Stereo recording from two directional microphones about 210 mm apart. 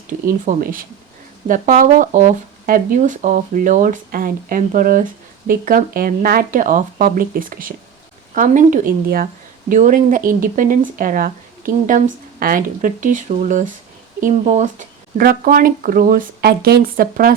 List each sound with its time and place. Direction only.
0.1 s speech: 40° right (ahead or behind)